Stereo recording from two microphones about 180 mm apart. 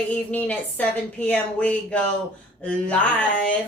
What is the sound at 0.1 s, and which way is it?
Speech, 10° left (ahead or behind).